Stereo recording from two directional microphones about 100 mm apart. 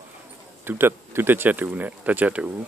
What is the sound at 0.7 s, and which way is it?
Speech, 25° right (ahead or behind).